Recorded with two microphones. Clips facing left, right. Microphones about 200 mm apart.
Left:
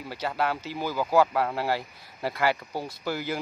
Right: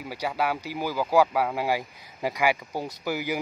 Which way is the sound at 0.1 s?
10° right (ahead or behind).